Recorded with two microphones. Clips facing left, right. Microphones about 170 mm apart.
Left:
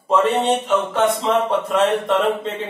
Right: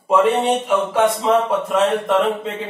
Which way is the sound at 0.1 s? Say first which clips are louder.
Right 1 dB; 10° right (ahead or behind).